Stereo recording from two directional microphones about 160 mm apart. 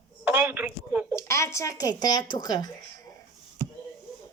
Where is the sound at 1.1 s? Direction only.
15° left (ahead or behind).